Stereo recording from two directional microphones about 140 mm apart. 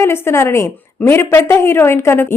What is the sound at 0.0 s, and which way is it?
A woman's voice, 20° left (ahead or behind).